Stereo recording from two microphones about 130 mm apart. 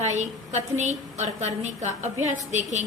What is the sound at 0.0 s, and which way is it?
A woman's voice, 65° right (ahead or behind).